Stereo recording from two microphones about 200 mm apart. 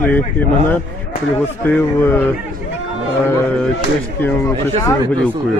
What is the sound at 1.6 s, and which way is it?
Speech, 10° left (ahead or behind).